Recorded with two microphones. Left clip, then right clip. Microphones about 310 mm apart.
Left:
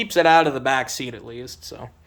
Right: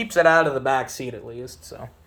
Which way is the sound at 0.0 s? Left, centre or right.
Centre.